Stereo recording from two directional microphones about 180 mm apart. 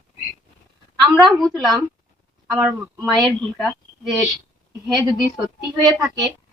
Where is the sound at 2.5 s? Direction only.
5° right (ahead or behind).